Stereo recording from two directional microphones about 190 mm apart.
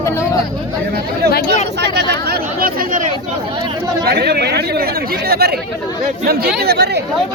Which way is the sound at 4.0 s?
60° right (ahead or behind).